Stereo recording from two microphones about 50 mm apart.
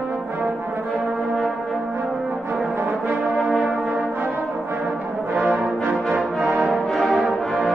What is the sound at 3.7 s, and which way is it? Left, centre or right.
Brass instrument, centre.